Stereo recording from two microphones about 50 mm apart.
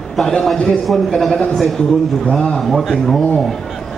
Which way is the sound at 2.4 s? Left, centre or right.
Centre.